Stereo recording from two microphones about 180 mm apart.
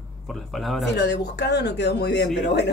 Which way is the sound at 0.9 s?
80° left.